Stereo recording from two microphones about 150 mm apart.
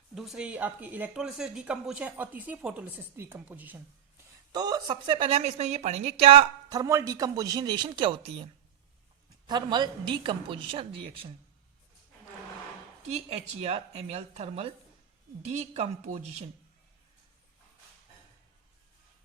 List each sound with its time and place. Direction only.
0.1 s speech: centre (ahead or behind)
4.5 s a woman's voice: 25° right (ahead or behind)
5.4 s speech: 50° right (ahead or behind)
6.7 s speech: 20° right (ahead or behind)
9.5 s a woman's voice: 30° right (ahead or behind)
13.0 s speech: 45° right (ahead or behind)